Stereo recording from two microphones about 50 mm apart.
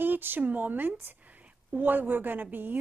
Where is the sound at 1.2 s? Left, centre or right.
Right.